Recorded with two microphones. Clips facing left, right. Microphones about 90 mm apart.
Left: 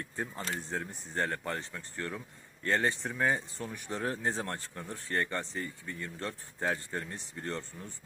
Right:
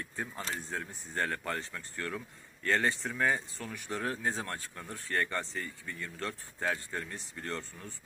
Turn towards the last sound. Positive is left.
turn(degrees=20)  # may be behind; listen again after turning